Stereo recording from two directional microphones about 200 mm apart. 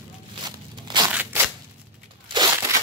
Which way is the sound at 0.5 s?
20° right (ahead or behind).